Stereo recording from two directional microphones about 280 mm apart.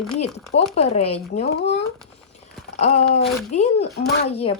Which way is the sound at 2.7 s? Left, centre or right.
Left.